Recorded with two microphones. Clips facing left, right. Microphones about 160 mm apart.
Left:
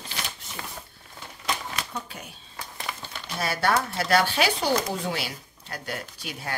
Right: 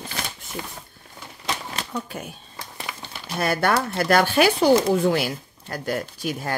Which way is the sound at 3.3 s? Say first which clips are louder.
Right 3 dB; 55° right (ahead or behind).